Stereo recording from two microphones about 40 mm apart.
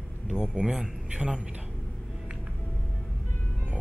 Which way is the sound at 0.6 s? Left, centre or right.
Centre.